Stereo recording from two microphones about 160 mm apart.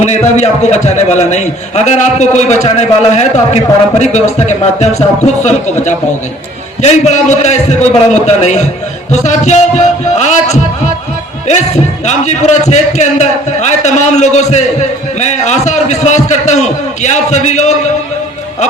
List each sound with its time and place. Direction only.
0.0 s a man's voice: 45° left (ahead or behind)
12.0 s a man's voice: 45° left (ahead or behind)